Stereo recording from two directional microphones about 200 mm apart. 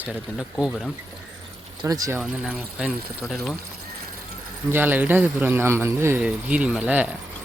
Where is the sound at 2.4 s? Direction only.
5° right (ahead or behind).